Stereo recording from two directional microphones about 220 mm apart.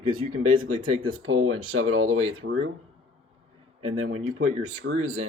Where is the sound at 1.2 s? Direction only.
80° right.